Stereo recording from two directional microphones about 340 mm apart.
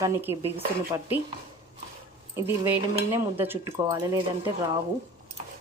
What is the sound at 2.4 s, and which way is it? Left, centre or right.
Cutlery, centre.